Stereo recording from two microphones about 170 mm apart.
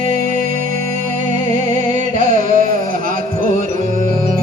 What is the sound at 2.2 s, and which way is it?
Music, 50° right (ahead or behind).